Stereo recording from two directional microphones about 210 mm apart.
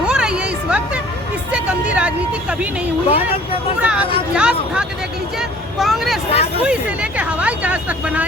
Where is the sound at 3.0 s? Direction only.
25° left (ahead or behind).